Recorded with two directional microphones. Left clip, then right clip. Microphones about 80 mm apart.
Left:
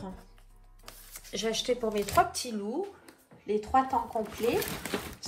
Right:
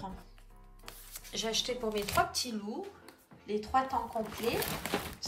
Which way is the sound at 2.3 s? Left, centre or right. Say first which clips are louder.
Left 3 dB; right.